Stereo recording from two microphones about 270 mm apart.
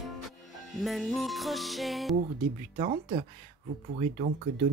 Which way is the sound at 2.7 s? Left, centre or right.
Right.